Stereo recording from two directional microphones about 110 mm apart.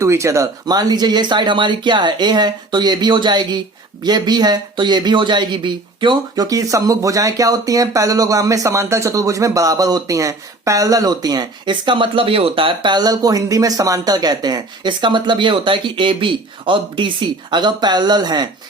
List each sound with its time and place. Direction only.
0.0 s speech: 25° right (ahead or behind)
0.6 s speech: 35° right (ahead or behind)